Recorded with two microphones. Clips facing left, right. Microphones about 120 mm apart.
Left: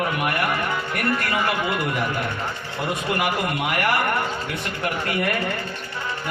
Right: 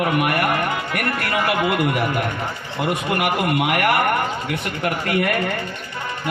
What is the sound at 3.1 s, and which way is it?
Speech, 60° right (ahead or behind).